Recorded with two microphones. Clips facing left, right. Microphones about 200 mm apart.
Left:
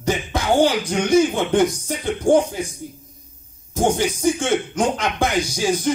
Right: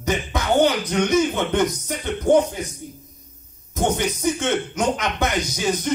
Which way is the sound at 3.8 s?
30° left (ahead or behind).